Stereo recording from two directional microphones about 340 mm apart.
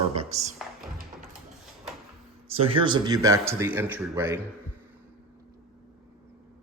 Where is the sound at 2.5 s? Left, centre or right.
Centre.